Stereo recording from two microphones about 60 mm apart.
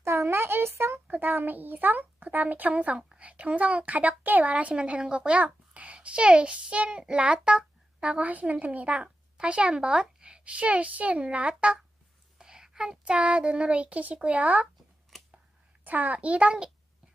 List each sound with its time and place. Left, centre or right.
0.0 s a sound: right
1.0 s a child's voice: right
12.4 s a woman's voice: centre; by 14.7 s right
15.1 s scissors: centre
15.8 s a woman's voice: right